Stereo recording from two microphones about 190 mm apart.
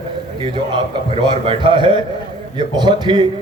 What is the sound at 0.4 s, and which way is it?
A man's voice, 25° right (ahead or behind).